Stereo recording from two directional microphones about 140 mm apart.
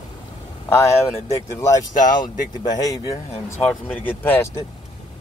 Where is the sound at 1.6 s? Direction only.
20° left (ahead or behind).